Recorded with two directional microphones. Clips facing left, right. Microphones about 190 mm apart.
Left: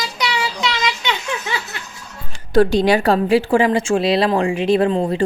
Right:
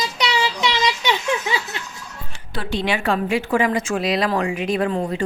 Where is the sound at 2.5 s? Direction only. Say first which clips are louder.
Left 10 dB; 40° left (ahead or behind).